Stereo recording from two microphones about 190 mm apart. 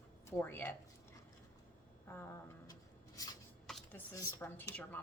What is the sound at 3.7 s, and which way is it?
Computer keyboard, centre (ahead or behind).